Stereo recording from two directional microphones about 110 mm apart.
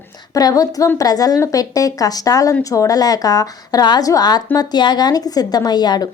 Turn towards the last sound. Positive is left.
turn(degrees=40)  # may be behind; listen again after turning